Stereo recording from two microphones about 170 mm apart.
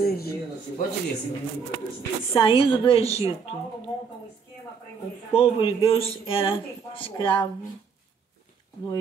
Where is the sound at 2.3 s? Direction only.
30° left (ahead or behind).